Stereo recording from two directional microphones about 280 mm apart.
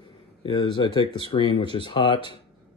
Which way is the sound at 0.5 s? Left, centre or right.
Centre.